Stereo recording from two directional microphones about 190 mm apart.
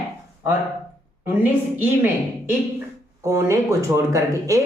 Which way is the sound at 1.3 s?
10° right (ahead or behind).